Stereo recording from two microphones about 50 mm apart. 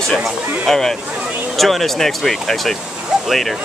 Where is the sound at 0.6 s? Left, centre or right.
Centre.